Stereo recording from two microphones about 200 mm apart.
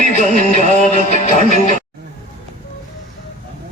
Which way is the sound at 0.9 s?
35° left (ahead or behind).